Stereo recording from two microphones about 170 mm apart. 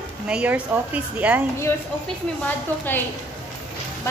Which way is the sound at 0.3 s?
10° right (ahead or behind).